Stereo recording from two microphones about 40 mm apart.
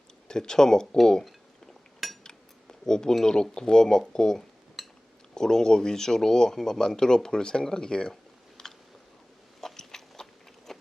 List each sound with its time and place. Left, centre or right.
0.3 s speech: centre
1.2 s cutlery: centre
2.2 s speech: centre
4.8 s dishes: centre
5.3 s speech: centre
8.1 s computer keyboard: centre
9.6 s a sound: centre